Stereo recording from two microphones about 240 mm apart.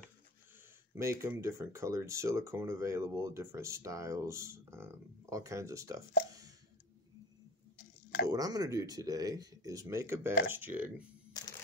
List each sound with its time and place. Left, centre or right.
0.9 s speech: centre
8.3 s speech: centre
11.4 s camera: centre